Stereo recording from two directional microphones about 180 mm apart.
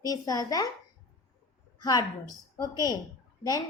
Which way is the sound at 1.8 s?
20° left (ahead or behind).